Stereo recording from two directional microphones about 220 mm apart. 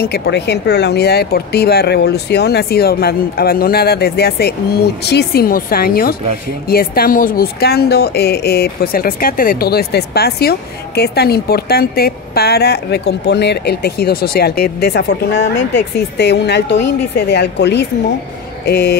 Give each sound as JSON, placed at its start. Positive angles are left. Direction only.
{"t": 0.0, "sound": "a woman's voice", "side_deg": 50}